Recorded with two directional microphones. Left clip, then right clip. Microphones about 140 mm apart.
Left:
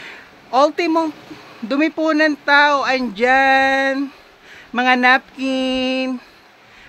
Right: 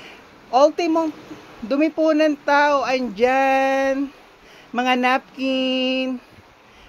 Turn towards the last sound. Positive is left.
turn(degrees=10)  # may be behind; listen again after turning